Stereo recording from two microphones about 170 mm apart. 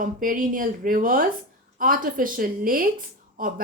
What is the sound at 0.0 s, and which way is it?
Speech, 55° right (ahead or behind).